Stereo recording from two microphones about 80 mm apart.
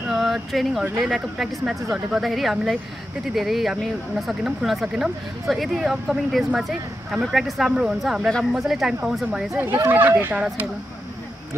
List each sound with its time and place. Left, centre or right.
0.1 s speech: centre
8.3 s a woman's voice: centre
8.5 s speech: centre
9.8 s speech: right